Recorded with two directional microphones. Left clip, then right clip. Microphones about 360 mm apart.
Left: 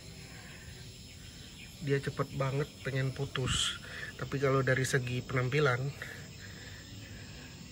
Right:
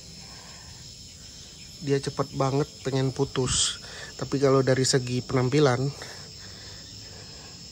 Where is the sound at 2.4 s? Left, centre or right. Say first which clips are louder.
Right 9 dB; right.